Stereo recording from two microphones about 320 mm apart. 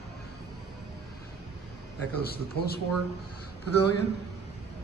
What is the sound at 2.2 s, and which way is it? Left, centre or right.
Speech, left.